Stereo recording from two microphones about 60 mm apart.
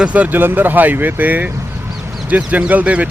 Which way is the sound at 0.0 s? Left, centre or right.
Right.